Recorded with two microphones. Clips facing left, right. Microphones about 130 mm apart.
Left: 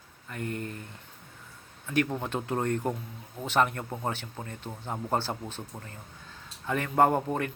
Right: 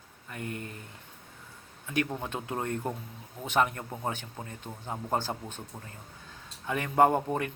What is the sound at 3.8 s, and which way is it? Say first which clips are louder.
Speech: left 3 dB; 10° left (ahead or behind).